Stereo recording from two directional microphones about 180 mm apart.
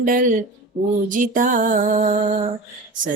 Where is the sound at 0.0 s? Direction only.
50° right (ahead or behind).